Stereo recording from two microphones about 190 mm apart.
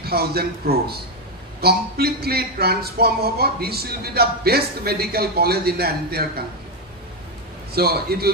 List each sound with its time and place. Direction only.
0.0 s a man's voice: 55° right (ahead or behind)
7.7 s a man's voice: 55° right (ahead or behind)